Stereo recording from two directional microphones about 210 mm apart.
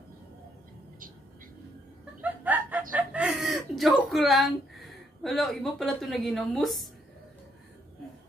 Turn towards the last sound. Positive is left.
turn(degrees=0)  # may be behind; listen again after turning